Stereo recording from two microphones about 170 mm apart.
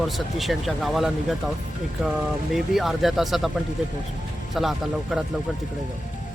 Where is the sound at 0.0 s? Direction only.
Centre (ahead or behind).